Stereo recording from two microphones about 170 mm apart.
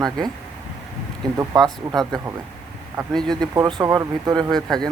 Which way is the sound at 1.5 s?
Centre (ahead or behind).